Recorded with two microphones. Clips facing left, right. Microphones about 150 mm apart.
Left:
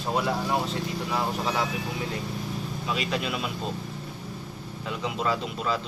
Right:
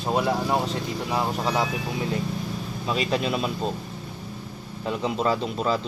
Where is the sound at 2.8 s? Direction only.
35° right (ahead or behind).